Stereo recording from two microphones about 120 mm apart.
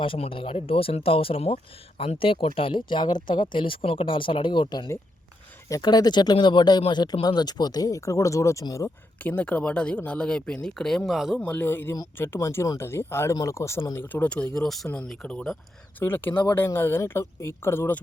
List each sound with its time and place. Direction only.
0.0 s speech: 50° left (ahead or behind); by 8.9 s 25° left (ahead or behind)
9.2 s speech: 10° left (ahead or behind)
11.3 s speech: 10° left (ahead or behind)
16.0 s speech: 15° left (ahead or behind)